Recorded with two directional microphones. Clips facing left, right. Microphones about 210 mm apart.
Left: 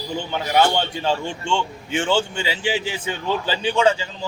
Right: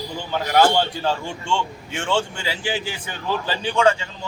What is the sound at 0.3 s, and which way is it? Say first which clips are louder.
A man's voice: right 2 dB; centre (ahead or behind).